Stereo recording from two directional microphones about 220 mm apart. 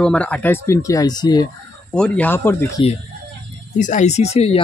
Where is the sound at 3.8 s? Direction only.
35° left (ahead or behind).